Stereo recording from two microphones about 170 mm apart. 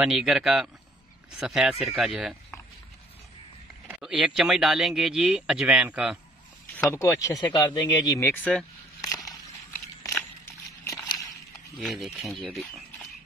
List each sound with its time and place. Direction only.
0.0 s speech: centre (ahead or behind)
3.9 s speech: 5° right (ahead or behind)
6.8 s speech: 15° left (ahead or behind)
10.1 s a sound: 15° left (ahead or behind)
11.8 s speech: centre (ahead or behind)